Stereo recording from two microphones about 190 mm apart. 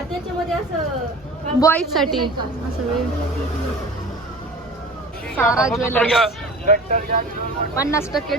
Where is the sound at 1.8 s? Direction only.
Centre (ahead or behind).